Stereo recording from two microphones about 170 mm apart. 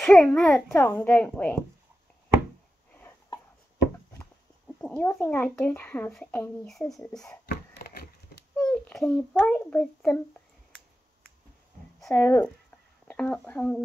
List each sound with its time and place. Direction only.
0.0 s a child's voice: 5° left (ahead or behind)
2.9 s a sound: 15° left (ahead or behind)
4.7 s a child's voice: 10° left (ahead or behind)
7.4 s a sound: 65° left (ahead or behind)
8.5 s a child's voice: 10° left (ahead or behind)
12.1 s a child's voice: 10° left (ahead or behind)